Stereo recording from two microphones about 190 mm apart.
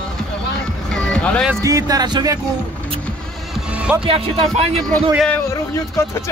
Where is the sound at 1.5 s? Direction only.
15° right (ahead or behind).